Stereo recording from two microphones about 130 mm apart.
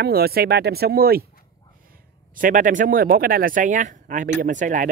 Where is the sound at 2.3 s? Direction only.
90° right.